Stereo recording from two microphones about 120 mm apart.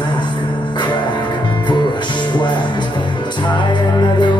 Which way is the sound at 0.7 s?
40° left (ahead or behind).